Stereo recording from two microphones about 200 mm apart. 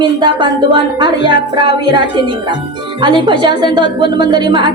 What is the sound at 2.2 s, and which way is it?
A woman's voice, 25° right (ahead or behind).